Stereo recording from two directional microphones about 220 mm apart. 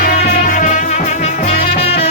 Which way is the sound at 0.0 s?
40° left (ahead or behind).